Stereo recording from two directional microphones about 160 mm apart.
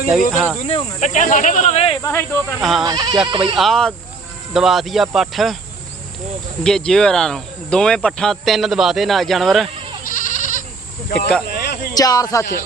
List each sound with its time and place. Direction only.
0.3 s speech: centre (ahead or behind)
0.7 s speech: 50° left (ahead or behind)
2.0 s speech: 15° left (ahead or behind)
2.6 s speech: centre (ahead or behind)
2.8 s speech: 25° right (ahead or behind)
3.6 s speech: 5° left (ahead or behind)
6.6 s speech: 5° left (ahead or behind)
10.1 s goat: 55° left (ahead or behind)
11.4 s a sound: 80° left
11.9 s speech: 25° left (ahead or behind)